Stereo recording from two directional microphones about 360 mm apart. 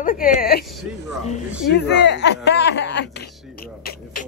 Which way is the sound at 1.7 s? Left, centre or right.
Left.